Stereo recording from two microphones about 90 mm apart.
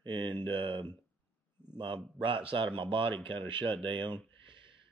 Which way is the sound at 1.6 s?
25° left (ahead or behind).